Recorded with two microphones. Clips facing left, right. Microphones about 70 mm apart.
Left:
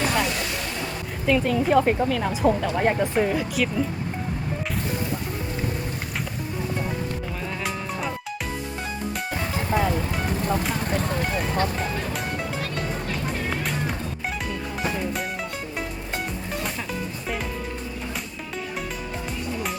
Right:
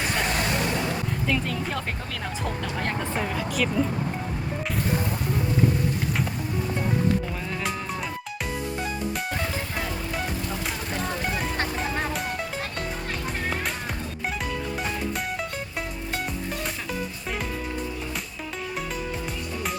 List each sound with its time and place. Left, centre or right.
0.3 s vehicle: right
1.3 s speech: centre
1.8 s speech: left
2.0 s speech: centre